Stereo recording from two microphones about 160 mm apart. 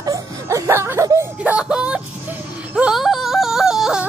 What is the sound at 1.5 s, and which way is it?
Speech, 5° right (ahead or behind).